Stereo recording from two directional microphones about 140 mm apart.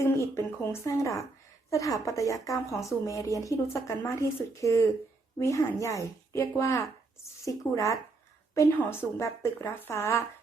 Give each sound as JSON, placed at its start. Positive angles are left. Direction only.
{"t": 0.0, "sound": "a woman's voice", "side_deg": 20}